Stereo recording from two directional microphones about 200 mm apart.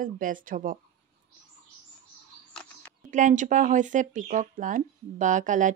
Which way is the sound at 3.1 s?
40° right (ahead or behind).